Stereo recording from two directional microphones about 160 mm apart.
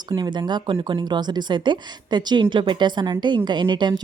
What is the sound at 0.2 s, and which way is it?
Speech, 25° right (ahead or behind).